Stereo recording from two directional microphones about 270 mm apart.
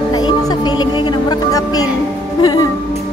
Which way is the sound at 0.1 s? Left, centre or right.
Centre.